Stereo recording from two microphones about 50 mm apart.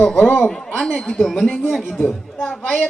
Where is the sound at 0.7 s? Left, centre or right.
Centre.